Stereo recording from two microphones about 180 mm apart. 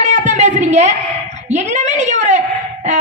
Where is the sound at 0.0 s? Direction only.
40° right (ahead or behind).